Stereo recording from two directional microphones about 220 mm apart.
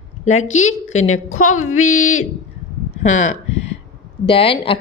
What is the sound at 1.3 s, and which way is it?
Speech, 70° left (ahead or behind).